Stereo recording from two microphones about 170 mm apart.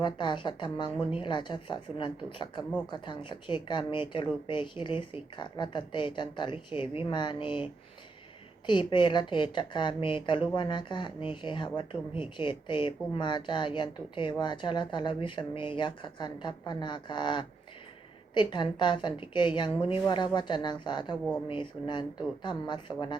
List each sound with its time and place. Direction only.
0.0 s a woman's voice: 25° left (ahead or behind)